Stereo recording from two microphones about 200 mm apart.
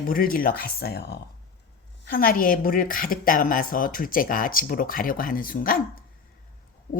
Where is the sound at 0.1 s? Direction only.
45° left (ahead or behind).